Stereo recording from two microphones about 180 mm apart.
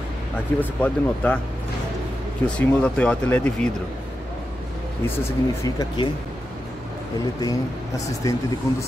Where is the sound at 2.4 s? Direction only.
5° left (ahead or behind).